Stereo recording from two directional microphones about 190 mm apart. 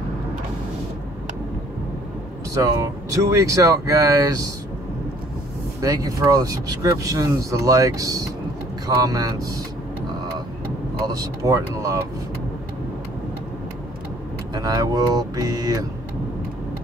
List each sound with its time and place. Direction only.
2.5 s speech: 15° right (ahead or behind)
5.8 s speech: 20° right (ahead or behind)
11.1 s speech: 20° right (ahead or behind)
14.5 s speech: 20° right (ahead or behind)